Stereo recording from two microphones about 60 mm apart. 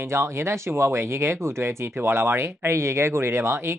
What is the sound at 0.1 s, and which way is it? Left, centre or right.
Speech, right.